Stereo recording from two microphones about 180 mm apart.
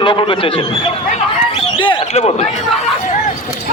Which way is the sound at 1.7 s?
25° left (ahead or behind).